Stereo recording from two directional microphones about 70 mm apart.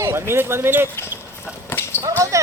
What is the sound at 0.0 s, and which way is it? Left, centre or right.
Speech, right.